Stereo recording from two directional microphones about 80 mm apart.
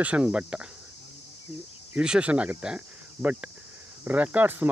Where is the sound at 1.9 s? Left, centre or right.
Centre.